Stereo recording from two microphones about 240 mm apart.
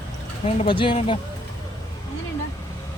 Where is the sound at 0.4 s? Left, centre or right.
Left.